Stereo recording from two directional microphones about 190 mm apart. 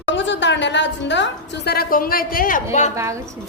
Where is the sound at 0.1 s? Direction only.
70° left (ahead or behind); by 2.6 s 50° left (ahead or behind).